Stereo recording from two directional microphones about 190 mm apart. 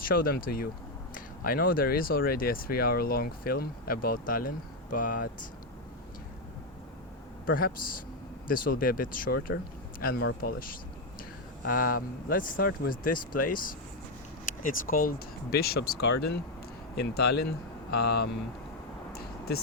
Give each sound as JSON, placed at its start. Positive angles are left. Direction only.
{"t": 0.0, "sound": "speech", "side_deg": 50}
{"t": 7.4, "sound": "speech", "side_deg": 50}
{"t": 19.1, "sound": "a sound", "side_deg": 55}